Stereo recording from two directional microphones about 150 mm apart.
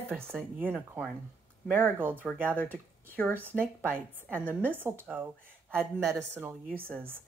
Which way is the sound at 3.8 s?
15° right (ahead or behind).